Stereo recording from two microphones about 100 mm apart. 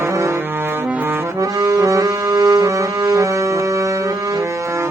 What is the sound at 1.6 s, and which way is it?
Music, 35° right (ahead or behind).